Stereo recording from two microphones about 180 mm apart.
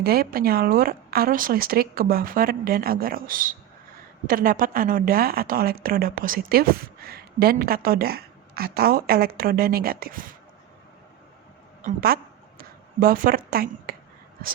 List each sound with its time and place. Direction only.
0.0 s a woman's voice: 60° right (ahead or behind)
11.8 s a woman's voice: 50° right (ahead or behind)